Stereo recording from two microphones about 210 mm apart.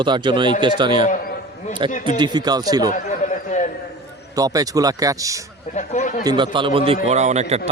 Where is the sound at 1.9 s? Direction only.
35° left (ahead or behind).